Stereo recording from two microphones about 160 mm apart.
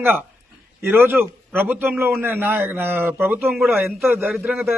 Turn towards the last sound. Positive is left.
turn(degrees=-15)  # may be behind; listen again after turning